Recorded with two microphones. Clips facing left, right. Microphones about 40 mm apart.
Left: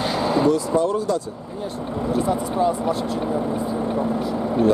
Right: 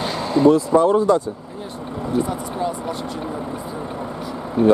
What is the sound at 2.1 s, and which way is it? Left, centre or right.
Speech, centre.